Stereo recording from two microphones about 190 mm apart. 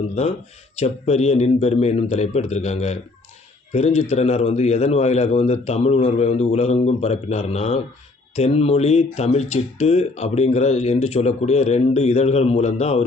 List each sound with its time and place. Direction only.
0.1 s speech: 35° left (ahead or behind)